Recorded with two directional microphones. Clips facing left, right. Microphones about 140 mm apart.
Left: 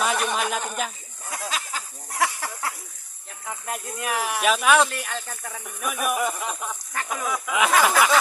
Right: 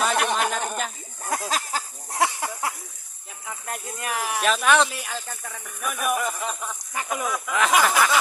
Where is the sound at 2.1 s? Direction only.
20° right (ahead or behind).